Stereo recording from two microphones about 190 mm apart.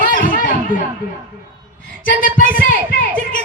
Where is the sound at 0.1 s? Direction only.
45° left (ahead or behind).